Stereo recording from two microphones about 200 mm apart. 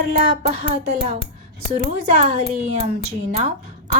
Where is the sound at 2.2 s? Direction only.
30° right (ahead or behind).